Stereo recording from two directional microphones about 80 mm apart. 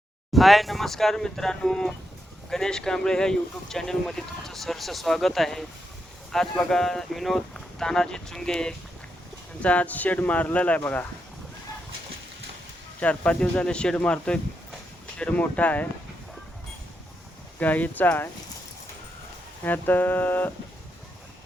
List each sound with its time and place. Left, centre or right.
0.3 s speech: centre; by 11.0 s left
13.0 s speech: centre
17.6 s speech: centre
19.6 s speech: left